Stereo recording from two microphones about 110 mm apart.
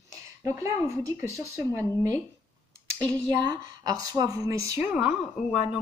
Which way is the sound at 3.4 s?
35° right (ahead or behind).